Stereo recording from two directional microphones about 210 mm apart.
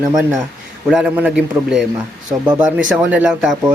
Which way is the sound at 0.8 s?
5° right (ahead or behind).